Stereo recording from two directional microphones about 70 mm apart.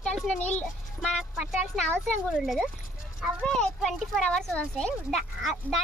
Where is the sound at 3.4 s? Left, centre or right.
Centre.